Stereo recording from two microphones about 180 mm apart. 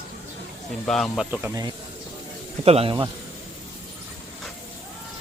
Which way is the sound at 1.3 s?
15° right (ahead or behind).